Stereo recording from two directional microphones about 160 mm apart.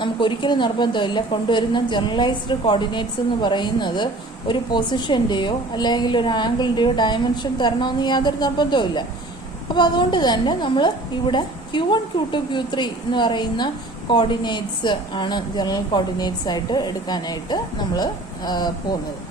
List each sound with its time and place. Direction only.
0.0 s a woman's voice: 30° left (ahead or behind)